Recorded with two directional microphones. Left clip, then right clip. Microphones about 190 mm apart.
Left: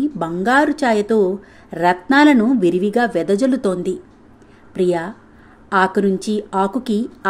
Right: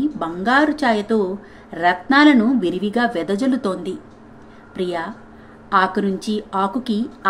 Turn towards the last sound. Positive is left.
turn(degrees=50)  # may be behind; listen again after turning